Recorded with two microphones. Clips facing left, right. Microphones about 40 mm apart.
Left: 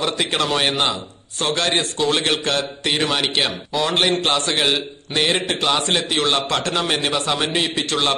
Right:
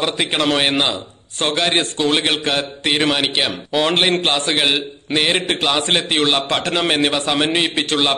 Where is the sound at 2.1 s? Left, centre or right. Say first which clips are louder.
Right 2 dB; right.